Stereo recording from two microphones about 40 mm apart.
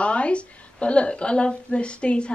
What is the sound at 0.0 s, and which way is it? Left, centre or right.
A woman's voice, left.